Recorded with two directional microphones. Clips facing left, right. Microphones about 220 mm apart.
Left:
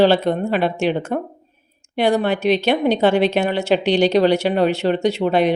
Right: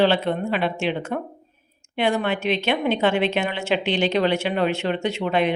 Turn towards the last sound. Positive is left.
turn(degrees=35)  # may be behind; listen again after turning